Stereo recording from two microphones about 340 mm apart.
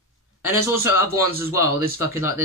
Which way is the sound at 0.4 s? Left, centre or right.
Centre.